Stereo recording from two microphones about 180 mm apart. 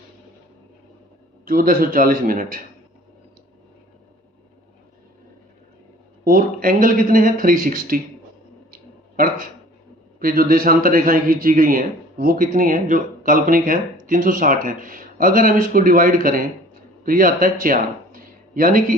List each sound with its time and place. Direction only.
1.5 s a man's voice: 50° right (ahead or behind)
6.2 s a man's voice: 50° right (ahead or behind)
8.7 s a sound: 50° right (ahead or behind)
10.2 s a man's voice: 50° right (ahead or behind)